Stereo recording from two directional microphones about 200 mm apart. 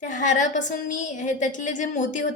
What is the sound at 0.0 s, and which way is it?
A woman's voice, 40° left (ahead or behind).